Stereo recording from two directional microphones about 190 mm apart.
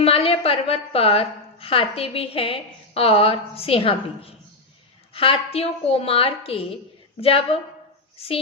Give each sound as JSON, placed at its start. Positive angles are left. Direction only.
{"t": 0.0, "sound": "a woman's voice", "side_deg": 30}